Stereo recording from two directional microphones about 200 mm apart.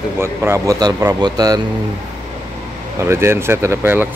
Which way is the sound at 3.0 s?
15° right (ahead or behind).